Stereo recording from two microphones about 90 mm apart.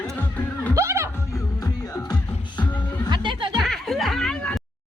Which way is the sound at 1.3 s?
40° left (ahead or behind).